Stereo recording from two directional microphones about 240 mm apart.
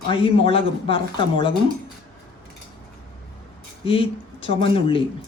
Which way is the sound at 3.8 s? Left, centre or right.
Left.